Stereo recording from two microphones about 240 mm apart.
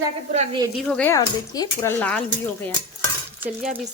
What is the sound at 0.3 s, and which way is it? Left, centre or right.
Speech, centre.